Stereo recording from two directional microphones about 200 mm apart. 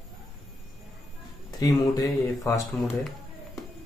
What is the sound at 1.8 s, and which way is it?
Speech, 20° left (ahead or behind).